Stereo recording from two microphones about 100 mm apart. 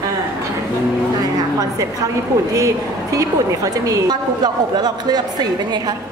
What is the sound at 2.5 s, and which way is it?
A woman's voice, 35° right (ahead or behind).